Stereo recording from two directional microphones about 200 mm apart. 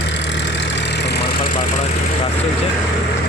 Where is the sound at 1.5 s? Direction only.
45° left (ahead or behind).